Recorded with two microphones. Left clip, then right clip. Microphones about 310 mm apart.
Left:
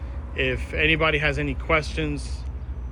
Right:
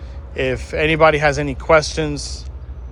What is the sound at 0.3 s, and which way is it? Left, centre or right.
Speech, centre.